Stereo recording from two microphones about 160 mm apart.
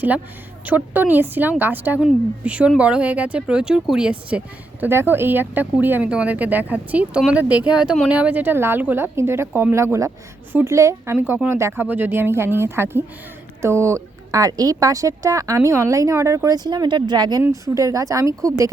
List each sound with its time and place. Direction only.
0.6 s speech: 10° right (ahead or behind)